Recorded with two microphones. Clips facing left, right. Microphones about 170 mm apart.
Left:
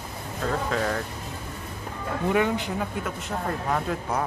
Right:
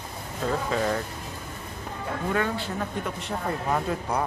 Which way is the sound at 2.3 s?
15° left (ahead or behind).